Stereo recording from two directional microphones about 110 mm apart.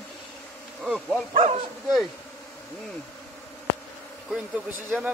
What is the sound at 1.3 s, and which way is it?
Speech, 75° right (ahead or behind).